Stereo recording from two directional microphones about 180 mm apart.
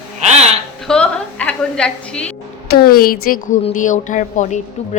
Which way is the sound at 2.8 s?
55° left (ahead or behind).